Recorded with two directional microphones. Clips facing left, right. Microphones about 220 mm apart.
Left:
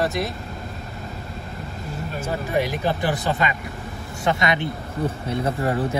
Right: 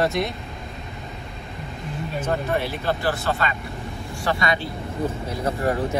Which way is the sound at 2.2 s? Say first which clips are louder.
Left 1 dB; 15° left (ahead or behind).